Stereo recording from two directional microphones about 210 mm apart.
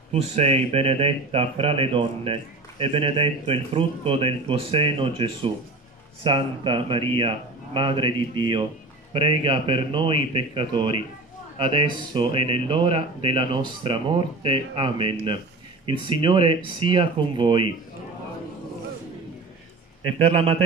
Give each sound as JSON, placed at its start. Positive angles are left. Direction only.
{"t": 0.1, "sound": "speech", "side_deg": -30}
{"t": 20.2, "sound": "speech", "side_deg": -25}